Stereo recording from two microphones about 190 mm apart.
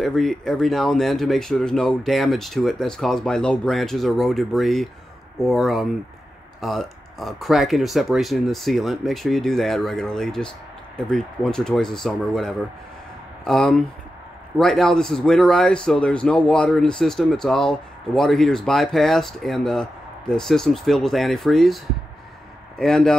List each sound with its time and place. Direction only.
0.0 s a man's voice: centre (ahead or behind)
22.8 s a man's voice: 5° left (ahead or behind)